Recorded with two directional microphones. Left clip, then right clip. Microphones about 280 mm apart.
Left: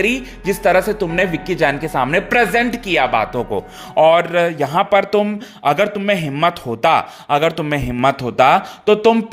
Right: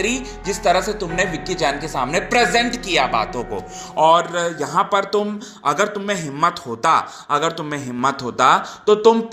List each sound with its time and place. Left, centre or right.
0.0 s speech: left
4.2 s speech: left
4.4 s speech: left
4.7 s speech: left